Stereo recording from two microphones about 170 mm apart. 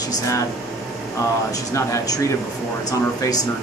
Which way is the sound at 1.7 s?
20° left (ahead or behind).